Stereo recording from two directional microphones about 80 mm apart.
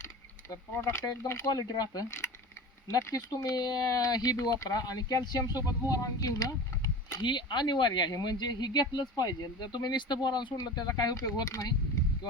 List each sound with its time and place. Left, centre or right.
0.5 s speech: left
7.2 s speech: left
10.6 s speech: left